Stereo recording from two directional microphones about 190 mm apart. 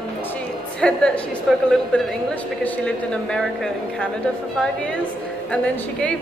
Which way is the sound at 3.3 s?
5° left (ahead or behind).